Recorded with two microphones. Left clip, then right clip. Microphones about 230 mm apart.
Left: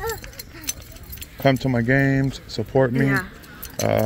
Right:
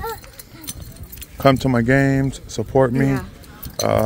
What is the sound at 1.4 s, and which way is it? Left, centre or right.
Speech, centre.